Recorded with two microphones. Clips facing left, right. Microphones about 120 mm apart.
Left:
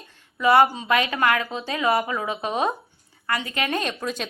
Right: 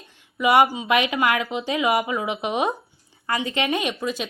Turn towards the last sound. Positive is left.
turn(degrees=-5)  # may be behind; listen again after turning